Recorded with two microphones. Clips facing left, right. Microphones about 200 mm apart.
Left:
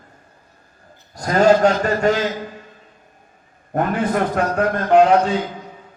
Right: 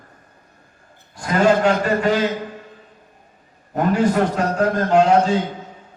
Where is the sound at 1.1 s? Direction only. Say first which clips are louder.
Left 2 dB; 40° left (ahead or behind).